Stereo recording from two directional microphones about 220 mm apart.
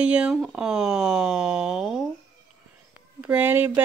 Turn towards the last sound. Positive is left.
turn(degrees=-10)  # may be behind; listen again after turning